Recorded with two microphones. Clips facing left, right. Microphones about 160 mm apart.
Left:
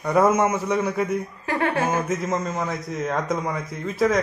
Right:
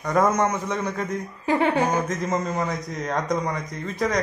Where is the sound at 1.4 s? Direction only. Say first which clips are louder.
Right 3 dB; 20° right (ahead or behind).